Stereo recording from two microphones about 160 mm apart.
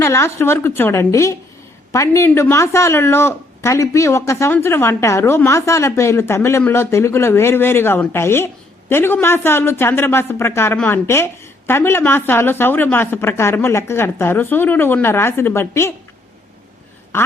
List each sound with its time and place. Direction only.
0.0 s speech: 15° left (ahead or behind)
17.1 s quack: 15° left (ahead or behind)